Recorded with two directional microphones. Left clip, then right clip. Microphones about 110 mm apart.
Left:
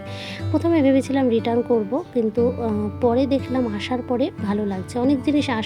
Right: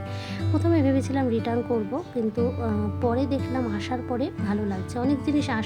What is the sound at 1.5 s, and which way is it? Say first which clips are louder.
Speech: left 6 dB; centre (ahead or behind).